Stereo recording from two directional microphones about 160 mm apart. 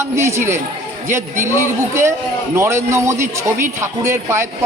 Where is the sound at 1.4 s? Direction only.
15° right (ahead or behind).